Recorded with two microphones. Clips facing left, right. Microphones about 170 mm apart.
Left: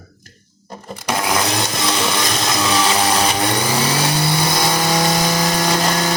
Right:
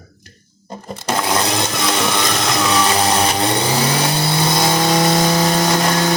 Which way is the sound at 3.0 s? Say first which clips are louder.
Right 1 dB; 25° right (ahead or behind).